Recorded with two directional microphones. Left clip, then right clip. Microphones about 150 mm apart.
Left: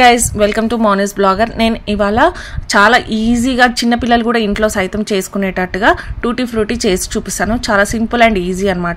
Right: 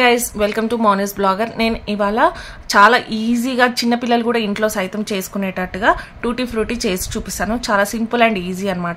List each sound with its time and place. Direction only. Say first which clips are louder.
0.0 s a woman's voice: left 6 dB; 35° left (ahead or behind)